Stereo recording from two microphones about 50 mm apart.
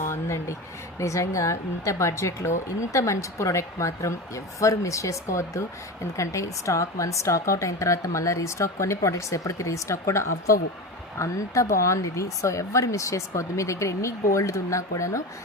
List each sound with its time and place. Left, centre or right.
0.1 s speech: left
0.9 s speech: left
2.9 s speech: left